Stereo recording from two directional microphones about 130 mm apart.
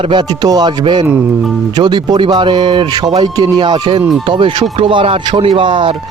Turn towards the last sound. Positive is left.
turn(degrees=-40)  # may be behind; listen again after turning